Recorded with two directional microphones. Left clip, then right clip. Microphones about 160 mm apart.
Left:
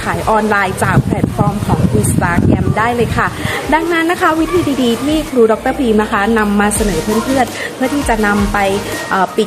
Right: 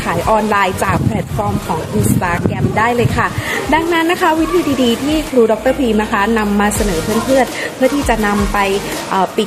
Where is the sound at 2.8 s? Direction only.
15° left (ahead or behind).